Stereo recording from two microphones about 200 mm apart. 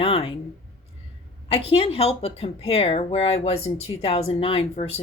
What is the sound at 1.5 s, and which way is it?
Speech, 25° left (ahead or behind).